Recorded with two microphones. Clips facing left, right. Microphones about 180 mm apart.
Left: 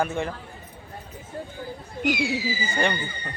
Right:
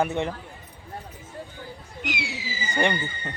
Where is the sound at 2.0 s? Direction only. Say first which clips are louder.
Left 9 dB; 45° left (ahead or behind).